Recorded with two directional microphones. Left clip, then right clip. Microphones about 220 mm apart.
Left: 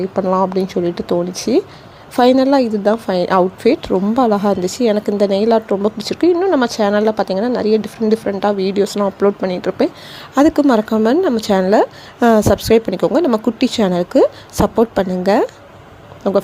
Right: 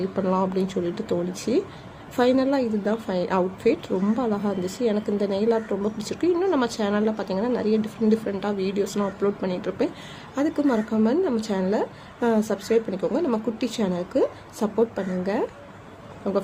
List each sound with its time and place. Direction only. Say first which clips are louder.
0.2 s a woman's voice: left 9 dB; 20° left (ahead or behind)